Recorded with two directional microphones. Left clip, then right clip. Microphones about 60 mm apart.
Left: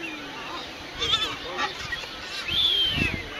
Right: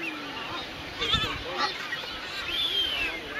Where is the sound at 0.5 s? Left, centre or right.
Left.